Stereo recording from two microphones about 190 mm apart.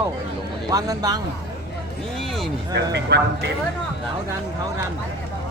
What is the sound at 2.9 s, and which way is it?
Speech, 65° right (ahead or behind).